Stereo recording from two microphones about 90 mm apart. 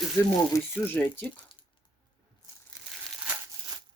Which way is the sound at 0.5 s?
35° left (ahead or behind).